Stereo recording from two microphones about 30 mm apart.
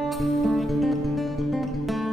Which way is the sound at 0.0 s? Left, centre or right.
Centre.